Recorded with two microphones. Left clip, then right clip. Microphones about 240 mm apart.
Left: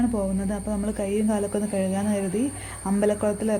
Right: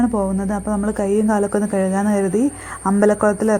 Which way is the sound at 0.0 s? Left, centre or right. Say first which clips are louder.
Right 6 dB; centre.